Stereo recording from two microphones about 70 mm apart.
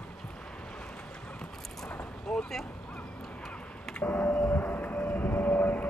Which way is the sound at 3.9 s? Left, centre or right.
Left.